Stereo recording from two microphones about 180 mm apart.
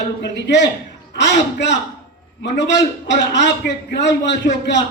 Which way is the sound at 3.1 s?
75° left (ahead or behind).